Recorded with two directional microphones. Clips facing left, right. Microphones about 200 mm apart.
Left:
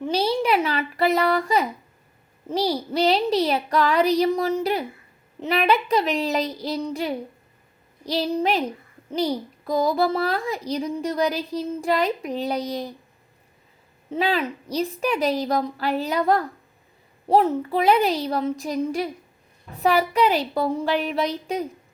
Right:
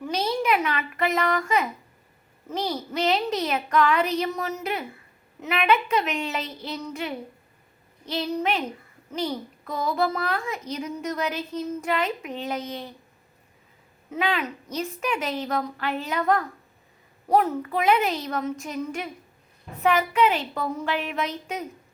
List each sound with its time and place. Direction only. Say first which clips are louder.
0.0 s a child's voice: left 4 dB; 30° left (ahead or behind)
14.1 s a child's voice: left 3 dB; 35° left (ahead or behind)